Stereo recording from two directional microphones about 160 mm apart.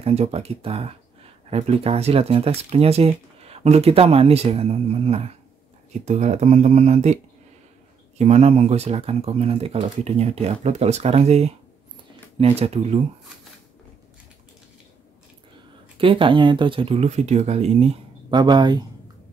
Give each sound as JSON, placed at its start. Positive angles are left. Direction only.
{"t": 0.0, "sound": "speech", "side_deg": -40}
{"t": 8.2, "sound": "speech", "side_deg": -45}
{"t": 16.0, "sound": "speech", "side_deg": -35}
{"t": 18.4, "sound": "speech", "side_deg": -25}